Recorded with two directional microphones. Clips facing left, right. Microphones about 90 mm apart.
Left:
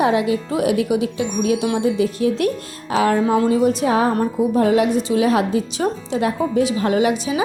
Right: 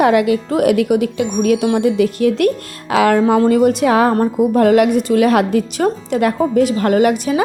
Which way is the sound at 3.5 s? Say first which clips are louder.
Right 4 dB; 65° right (ahead or behind).